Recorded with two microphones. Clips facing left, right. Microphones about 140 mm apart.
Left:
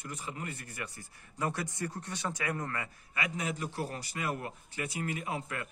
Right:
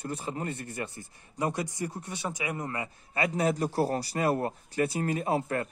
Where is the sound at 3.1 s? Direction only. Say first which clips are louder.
Right 9 dB; 35° right (ahead or behind).